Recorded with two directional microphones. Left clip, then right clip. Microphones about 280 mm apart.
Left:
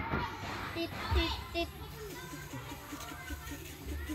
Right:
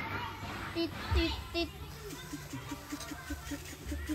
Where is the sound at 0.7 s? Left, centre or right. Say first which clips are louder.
Right 2 dB; centre.